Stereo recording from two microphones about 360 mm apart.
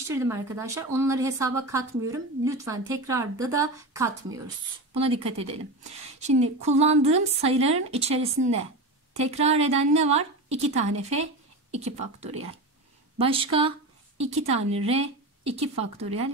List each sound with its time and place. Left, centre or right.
0.1 s a woman's voice: centre